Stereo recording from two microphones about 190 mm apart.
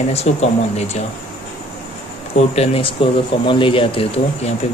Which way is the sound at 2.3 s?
35° left (ahead or behind).